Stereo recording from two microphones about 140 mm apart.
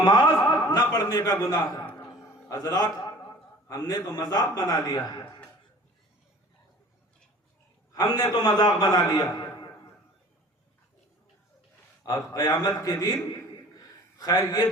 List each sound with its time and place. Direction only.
0.0 s chuckle: 30° left (ahead or behind)
2.5 s a man's voice: 25° left (ahead or behind)
7.9 s a man's voice: 30° left (ahead or behind)
12.0 s a man's voice: 25° left (ahead or behind)